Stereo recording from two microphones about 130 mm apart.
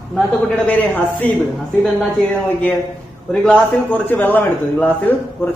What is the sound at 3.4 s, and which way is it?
A man's voice, 15° left (ahead or behind).